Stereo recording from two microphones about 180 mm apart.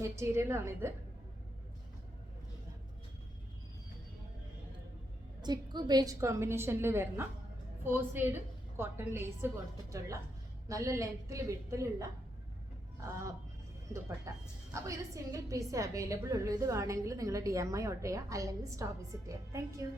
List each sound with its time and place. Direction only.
0.0 s a woman's voice: 15° right (ahead or behind)
5.4 s a woman's voice: 25° right (ahead or behind)
10.7 s a woman's voice: 15° right (ahead or behind)
13.9 s a woman's voice: 15° right (ahead or behind)